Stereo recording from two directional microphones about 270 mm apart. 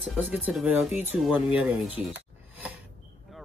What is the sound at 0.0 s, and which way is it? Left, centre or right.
Speech, centre.